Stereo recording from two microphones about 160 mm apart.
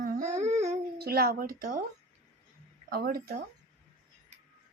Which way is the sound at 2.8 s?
70° right (ahead or behind).